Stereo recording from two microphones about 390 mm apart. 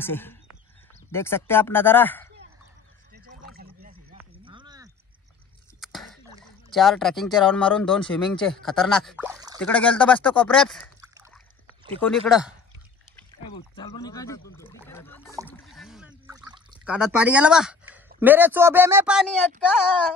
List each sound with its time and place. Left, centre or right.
0.0 s speech: centre
3.1 s a sound: right
5.8 s speech: centre
9.6 s speech: centre
11.1 s rowboat: centre
12.0 s speech: centre
13.5 s speech: centre
15.4 s a sound: centre